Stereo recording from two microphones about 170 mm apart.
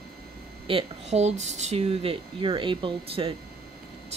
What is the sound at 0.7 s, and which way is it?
Speech, 35° right (ahead or behind).